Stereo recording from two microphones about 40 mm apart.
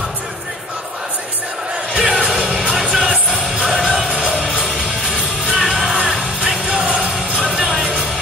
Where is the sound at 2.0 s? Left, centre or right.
Centre.